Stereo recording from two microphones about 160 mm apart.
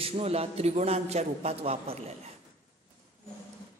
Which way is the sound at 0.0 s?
40° right (ahead or behind).